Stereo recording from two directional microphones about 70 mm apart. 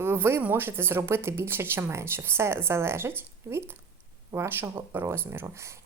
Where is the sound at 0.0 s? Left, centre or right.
Right.